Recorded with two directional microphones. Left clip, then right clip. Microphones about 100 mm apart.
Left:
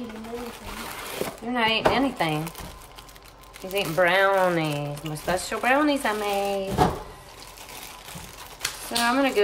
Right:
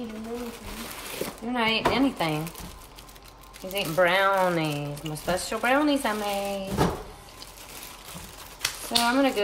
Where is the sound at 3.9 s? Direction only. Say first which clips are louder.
Left 1 dB; 10° left (ahead or behind).